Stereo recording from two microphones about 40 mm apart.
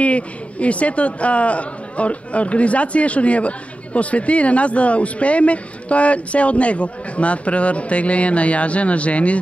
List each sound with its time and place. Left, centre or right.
0.0 s a man's voice: left